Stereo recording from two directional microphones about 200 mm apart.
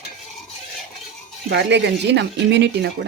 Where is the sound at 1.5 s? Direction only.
60° right (ahead or behind).